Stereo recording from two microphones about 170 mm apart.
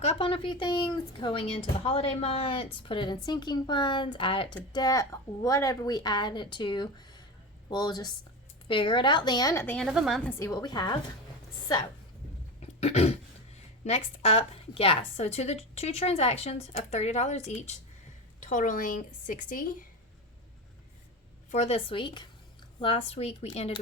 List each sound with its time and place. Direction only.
0.0 s a woman's voice: 35° left (ahead or behind)
9.6 s a woman's voice: centre (ahead or behind)
10.2 s a woman's voice: 15° left (ahead or behind)
12.8 s a woman's voice: 40° left (ahead or behind)
18.3 s a woman's voice: 50° left (ahead or behind)
21.5 s a woman's voice: 40° left (ahead or behind)